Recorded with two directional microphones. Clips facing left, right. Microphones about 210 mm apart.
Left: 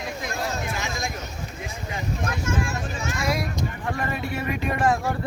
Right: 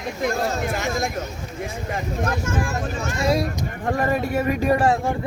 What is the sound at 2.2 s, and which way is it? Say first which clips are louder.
Speech: right 2 dB; 45° right (ahead or behind).